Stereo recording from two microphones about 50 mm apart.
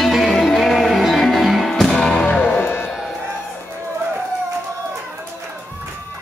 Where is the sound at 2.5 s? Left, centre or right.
Left.